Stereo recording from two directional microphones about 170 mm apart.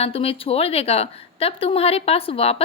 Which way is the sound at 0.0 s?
35° left (ahead or behind).